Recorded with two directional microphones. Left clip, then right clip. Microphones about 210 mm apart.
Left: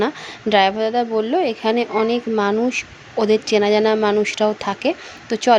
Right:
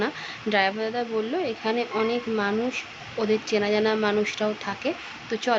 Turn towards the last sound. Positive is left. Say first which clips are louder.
# left 9 dB
turn(degrees=35)  # may be behind; listen again after turning